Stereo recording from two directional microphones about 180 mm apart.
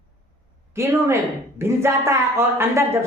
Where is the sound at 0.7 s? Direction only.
15° right (ahead or behind).